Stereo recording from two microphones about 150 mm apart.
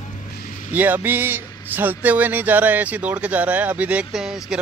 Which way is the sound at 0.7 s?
10° right (ahead or behind).